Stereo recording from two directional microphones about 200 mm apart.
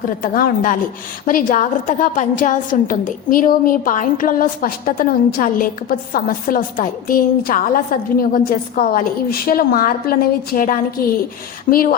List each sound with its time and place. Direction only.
0.2 s a woman's voice: 45° left (ahead or behind)